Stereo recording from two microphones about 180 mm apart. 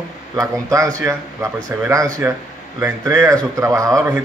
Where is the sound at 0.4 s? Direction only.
20° right (ahead or behind).